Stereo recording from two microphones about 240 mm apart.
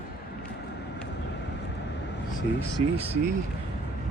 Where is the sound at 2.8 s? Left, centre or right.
Right.